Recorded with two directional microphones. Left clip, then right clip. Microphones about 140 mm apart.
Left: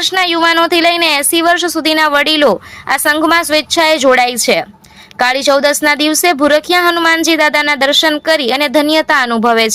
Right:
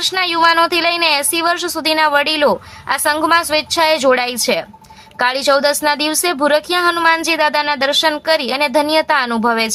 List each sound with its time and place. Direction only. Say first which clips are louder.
0.0 s speech: left 2 dB; 20° left (ahead or behind)